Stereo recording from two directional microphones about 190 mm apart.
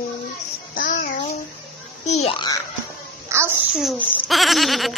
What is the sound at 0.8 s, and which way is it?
Child singing, 45° left (ahead or behind).